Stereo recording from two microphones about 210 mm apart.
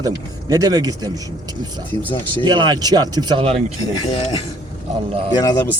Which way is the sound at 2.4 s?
20° right (ahead or behind).